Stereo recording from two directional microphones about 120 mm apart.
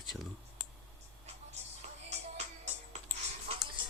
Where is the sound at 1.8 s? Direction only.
65° right (ahead or behind).